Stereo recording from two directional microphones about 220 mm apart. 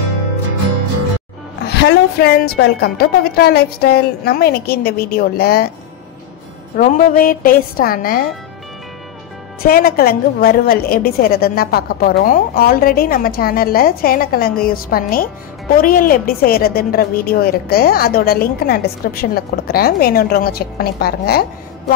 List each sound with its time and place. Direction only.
1.7 s a woman's voice: 50° left (ahead or behind)
6.8 s a woman's voice: 40° left (ahead or behind)
9.6 s a woman's voice: 45° left (ahead or behind)